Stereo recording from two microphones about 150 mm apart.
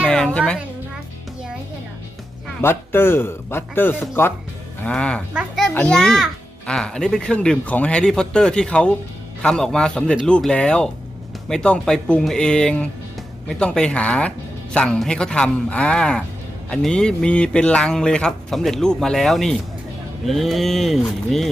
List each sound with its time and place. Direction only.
0.1 s a child's voice: 5° left (ahead or behind)
2.6 s speech: 15° left (ahead or behind)
5.3 s a sound: 10° right (ahead or behind)
5.6 s a child's voice: 5° left (ahead or behind)